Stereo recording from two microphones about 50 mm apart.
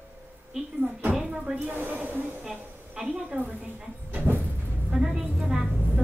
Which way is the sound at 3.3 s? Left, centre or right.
Right.